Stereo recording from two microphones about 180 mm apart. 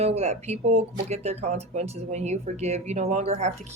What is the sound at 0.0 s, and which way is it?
Speech, 35° right (ahead or behind).